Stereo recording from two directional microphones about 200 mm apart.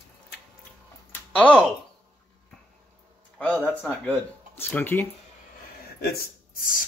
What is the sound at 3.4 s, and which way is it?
Speech, 5° left (ahead or behind).